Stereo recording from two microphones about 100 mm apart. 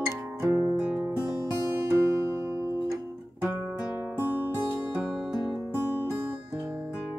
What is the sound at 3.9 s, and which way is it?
Music, 20° right (ahead or behind).